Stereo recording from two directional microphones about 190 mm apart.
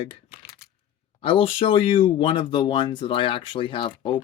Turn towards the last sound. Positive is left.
turn(degrees=25)  # may be behind; listen again after turning